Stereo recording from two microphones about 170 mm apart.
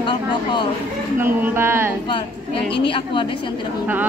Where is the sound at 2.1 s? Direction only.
30° left (ahead or behind).